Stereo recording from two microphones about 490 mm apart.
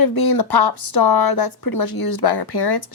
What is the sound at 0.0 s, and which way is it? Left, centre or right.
Speech, left.